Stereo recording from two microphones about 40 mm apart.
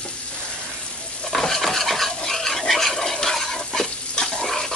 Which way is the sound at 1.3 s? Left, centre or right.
Centre.